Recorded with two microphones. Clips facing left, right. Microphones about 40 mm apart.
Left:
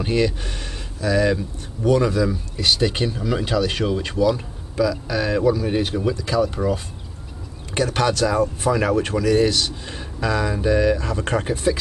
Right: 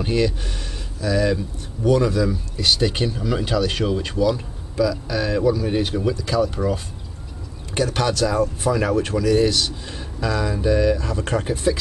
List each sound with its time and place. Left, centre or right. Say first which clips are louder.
0.0 s speech: even; centre
6.2 s speech: left 1 dB; centre